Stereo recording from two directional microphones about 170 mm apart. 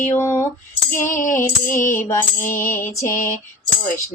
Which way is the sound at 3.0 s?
50° left (ahead or behind).